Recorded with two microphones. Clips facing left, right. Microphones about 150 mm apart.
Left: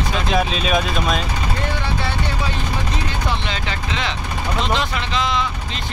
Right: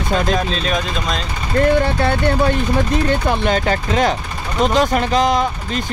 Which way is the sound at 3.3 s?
45° right (ahead or behind).